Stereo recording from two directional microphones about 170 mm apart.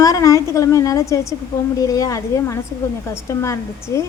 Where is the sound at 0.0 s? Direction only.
20° left (ahead or behind).